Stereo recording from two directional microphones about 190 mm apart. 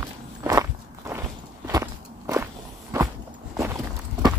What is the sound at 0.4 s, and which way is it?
Walk, 15° right (ahead or behind).